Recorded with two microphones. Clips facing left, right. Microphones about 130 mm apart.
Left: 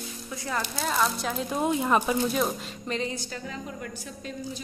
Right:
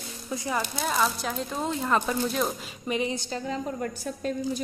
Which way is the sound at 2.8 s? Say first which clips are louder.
Right 3 dB; 15° right (ahead or behind).